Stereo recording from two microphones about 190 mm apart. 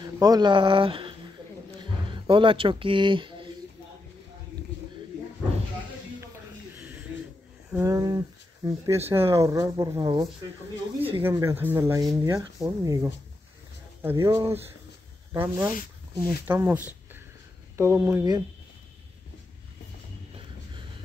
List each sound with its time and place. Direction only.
0.0 s speech: 20° right (ahead or behind)
6.2 s a sound: 10° right (ahead or behind)
7.7 s speech: 15° right (ahead or behind)
11.2 s speech: 15° right (ahead or behind)